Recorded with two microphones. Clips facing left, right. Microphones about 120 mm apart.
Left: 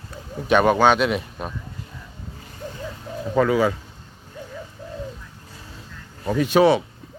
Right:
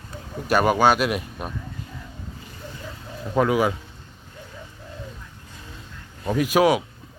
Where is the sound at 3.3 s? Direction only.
10° right (ahead or behind).